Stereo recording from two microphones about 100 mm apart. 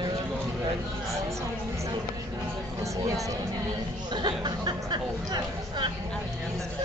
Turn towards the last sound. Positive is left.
turn(degrees=-50)  # may be behind; listen again after turning